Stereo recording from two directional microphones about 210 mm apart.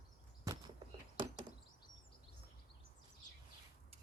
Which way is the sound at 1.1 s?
25° right (ahead or behind).